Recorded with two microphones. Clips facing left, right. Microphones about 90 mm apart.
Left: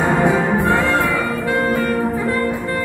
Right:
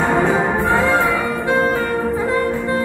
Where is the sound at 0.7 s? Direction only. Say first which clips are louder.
Right 1 dB; 20° right (ahead or behind).